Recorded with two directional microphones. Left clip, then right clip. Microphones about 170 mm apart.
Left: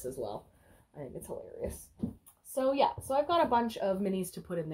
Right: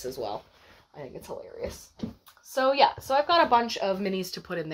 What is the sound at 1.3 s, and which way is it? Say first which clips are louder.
Speech: right 4 dB; 20° right (ahead or behind).